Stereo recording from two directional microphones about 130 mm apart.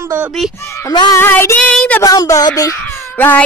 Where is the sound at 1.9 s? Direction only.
25° left (ahead or behind).